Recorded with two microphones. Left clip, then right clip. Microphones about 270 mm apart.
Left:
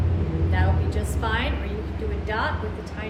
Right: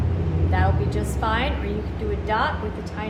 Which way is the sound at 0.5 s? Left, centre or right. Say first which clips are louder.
Right 5 dB; centre.